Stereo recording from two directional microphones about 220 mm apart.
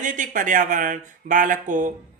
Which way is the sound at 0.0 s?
35° right (ahead or behind).